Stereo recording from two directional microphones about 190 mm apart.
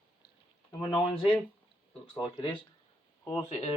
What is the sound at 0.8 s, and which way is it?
Speech, 25° left (ahead or behind).